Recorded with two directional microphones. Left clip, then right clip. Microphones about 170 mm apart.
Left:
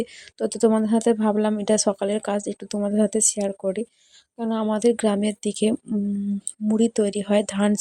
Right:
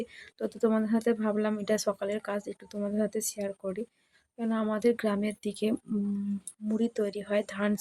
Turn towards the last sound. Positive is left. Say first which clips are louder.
# left 8 dB
turn(degrees=40)  # may be behind; listen again after turning